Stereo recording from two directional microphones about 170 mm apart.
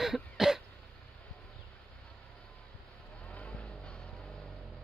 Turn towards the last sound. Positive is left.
turn(degrees=5)  # may be behind; listen again after turning